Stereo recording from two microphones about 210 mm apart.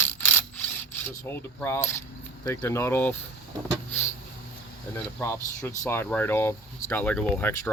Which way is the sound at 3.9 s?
10° left (ahead or behind).